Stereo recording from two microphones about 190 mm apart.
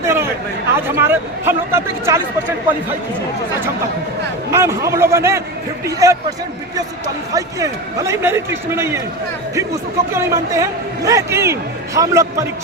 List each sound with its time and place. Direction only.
0.0 s chatter: 15° right (ahead or behind)
0.8 s a man's voice: 10° right (ahead or behind)
4.5 s a man's voice: 15° right (ahead or behind)
7.3 s a man's voice: 15° right (ahead or behind)
10.2 s a man's voice: 15° right (ahead or behind)